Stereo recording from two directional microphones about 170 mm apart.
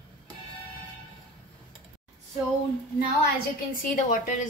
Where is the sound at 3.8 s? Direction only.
55° left (ahead or behind).